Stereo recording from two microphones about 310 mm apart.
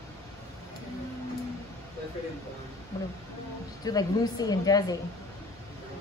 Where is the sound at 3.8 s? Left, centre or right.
Centre.